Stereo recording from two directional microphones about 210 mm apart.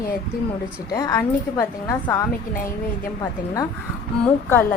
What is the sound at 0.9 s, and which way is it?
A woman's voice, 15° left (ahead or behind).